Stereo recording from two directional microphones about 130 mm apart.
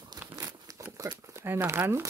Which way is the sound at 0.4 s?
25° right (ahead or behind).